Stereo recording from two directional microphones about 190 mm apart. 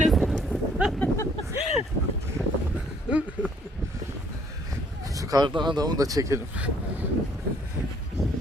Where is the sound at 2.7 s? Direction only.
5° right (ahead or behind).